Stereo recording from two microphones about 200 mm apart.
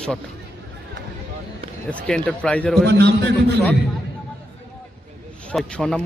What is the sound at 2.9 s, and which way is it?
Speech, 55° right (ahead or behind).